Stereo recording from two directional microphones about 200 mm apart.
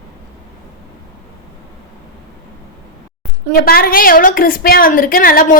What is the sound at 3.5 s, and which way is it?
A woman's voice, 50° left (ahead or behind).